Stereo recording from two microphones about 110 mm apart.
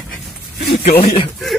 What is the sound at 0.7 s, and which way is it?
Speech, 60° left (ahead or behind).